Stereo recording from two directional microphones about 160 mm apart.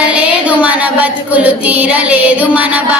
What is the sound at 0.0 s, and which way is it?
Music, 10° right (ahead or behind).